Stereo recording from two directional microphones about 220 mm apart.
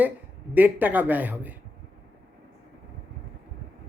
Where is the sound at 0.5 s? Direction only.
10° right (ahead or behind).